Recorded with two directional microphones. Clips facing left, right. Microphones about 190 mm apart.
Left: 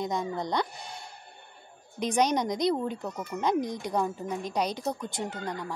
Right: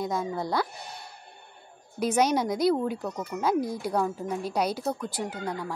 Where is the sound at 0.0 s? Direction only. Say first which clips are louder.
Right 1 dB; 5° right (ahead or behind).